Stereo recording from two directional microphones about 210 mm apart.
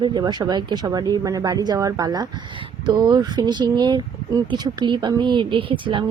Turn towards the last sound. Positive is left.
turn(degrees=-25)  # may be behind; listen again after turning